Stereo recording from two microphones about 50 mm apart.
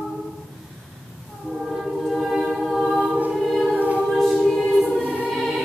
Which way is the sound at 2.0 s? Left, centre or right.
Centre.